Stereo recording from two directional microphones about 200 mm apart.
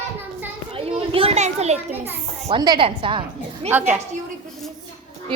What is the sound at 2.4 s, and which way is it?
Speech, 20° right (ahead or behind).